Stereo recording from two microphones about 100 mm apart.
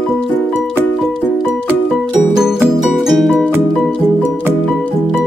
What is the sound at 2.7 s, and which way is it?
Music, centre (ahead or behind).